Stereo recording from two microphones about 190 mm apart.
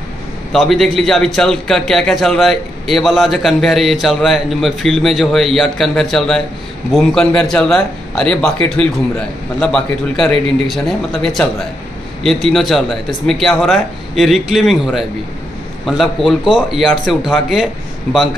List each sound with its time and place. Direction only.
0.5 s a man's voice: centre (ahead or behind)